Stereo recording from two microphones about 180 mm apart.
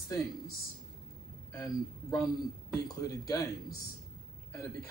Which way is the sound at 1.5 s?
15° left (ahead or behind).